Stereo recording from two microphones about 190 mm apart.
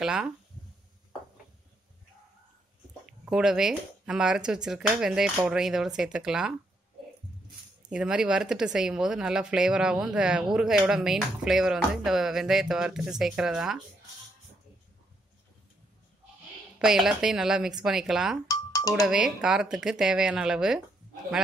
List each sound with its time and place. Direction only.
0.0 s speech: 5° right (ahead or behind)
3.1 s speech: 5° right (ahead or behind)
7.9 s speech: 5° right (ahead or behind)
16.7 s speech: 5° right (ahead or behind)
18.5 s music: 20° left (ahead or behind)
18.9 s speech: centre (ahead or behind)